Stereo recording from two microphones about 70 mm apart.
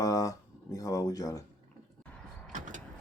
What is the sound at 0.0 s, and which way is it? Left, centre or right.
Speech, left.